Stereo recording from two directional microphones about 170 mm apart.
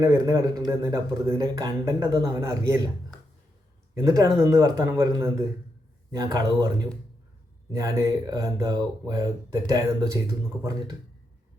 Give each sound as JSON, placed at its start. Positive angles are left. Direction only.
{"t": 0.0, "sound": "speech", "side_deg": -20}
{"t": 3.9, "sound": "speech", "side_deg": -20}